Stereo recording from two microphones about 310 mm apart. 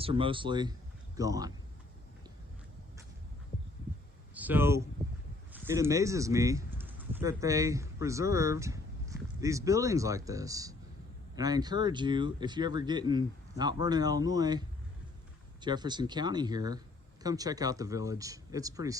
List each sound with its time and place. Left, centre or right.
0.0 s a man's voice: centre
4.4 s speech: centre
15.6 s speech: centre